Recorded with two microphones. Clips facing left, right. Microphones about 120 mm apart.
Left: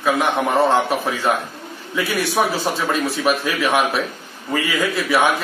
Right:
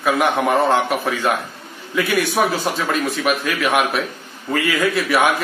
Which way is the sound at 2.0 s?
Centre (ahead or behind).